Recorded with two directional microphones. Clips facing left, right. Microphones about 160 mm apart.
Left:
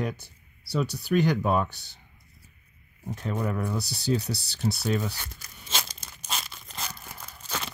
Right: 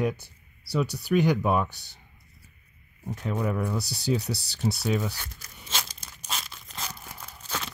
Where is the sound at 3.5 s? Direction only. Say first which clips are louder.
Right 1 dB; 15° right (ahead or behind).